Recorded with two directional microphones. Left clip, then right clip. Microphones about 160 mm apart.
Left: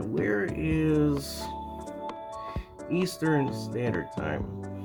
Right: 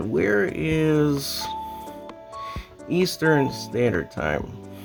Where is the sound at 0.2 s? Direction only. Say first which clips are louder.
Right 7 dB; 65° right (ahead or behind).